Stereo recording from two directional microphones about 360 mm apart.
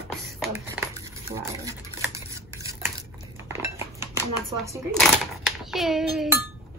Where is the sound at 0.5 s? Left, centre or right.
Centre.